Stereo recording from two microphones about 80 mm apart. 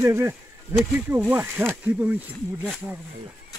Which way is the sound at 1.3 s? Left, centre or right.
Centre.